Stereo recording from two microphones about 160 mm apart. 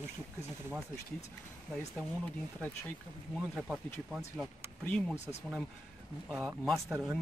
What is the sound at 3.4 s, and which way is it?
Speech, 5° right (ahead or behind).